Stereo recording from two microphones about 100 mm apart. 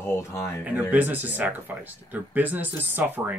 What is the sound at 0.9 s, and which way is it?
Speech, 15° right (ahead or behind).